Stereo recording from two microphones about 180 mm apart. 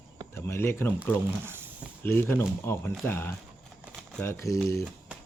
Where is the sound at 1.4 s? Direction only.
10° right (ahead or behind).